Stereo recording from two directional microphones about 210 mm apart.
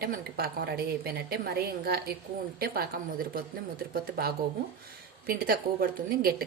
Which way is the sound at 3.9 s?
45° right (ahead or behind).